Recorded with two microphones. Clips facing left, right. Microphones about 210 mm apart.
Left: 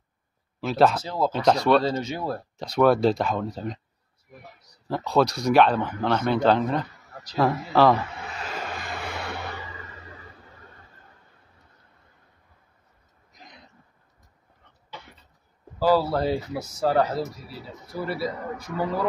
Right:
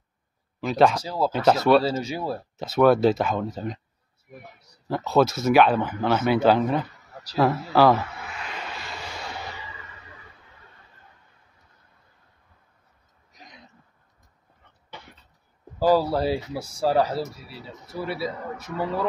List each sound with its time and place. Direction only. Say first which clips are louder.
0.6 s speech: right 1 dB; centre (ahead or behind)
0.9 s speech: even; 10° right (ahead or behind)
4.8 s speech: right 1 dB; centre (ahead or behind)
8.4 s a sound: left 4 dB; 45° left (ahead or behind); by 9.5 s 60° left (ahead or behind)
16.0 s speech: right 1 dB; 10° right (ahead or behind)